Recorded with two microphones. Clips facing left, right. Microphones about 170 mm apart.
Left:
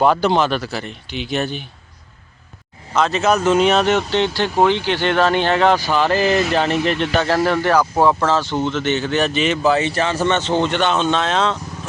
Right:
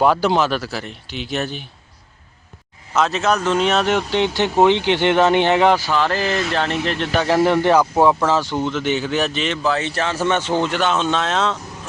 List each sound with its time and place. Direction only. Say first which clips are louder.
0.0 s speech: left 1 dB; 5° right (ahead or behind)
2.9 s speech: left 2 dB; centre (ahead or behind)
5.9 s speech: left 3 dB; 5° left (ahead or behind)
7.1 s speech: right 5 dB; 10° right (ahead or behind)